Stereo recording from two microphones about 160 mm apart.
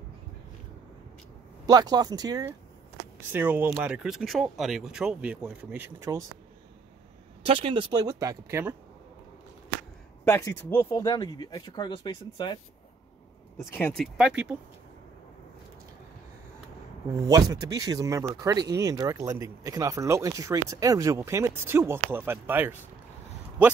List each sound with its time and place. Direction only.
1.7 s speech: 25° right (ahead or behind)
3.3 s speech: 10° right (ahead or behind)
7.4 s speech: 35° right (ahead or behind); by 8.7 s 15° right (ahead or behind)
10.2 s speech: 15° left (ahead or behind)
13.7 s speech: 10° left (ahead or behind)
14.1 s speech: 5° right (ahead or behind)
17.3 s speech: 20° right (ahead or behind)